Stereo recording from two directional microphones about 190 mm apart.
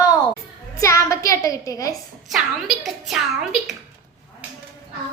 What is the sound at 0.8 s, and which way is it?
A woman's voice, 15° left (ahead or behind).